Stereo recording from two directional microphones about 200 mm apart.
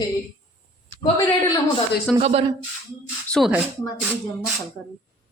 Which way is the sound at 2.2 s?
30° right (ahead or behind).